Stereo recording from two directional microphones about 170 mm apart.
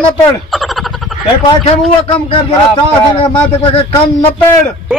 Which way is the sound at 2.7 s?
30° left (ahead or behind).